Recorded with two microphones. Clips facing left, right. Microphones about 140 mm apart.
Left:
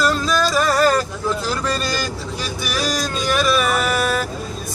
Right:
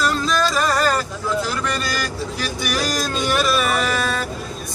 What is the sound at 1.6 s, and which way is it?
Vehicle, 30° left (ahead or behind).